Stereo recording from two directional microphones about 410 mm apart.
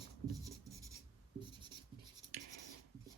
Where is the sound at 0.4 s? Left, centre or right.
Centre.